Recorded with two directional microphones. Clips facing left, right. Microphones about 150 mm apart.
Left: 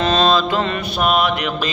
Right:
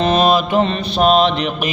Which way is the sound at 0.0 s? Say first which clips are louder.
Right 2 dB; 20° right (ahead or behind).